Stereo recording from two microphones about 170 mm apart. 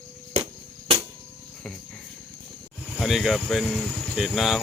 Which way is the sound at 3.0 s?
Centre (ahead or behind).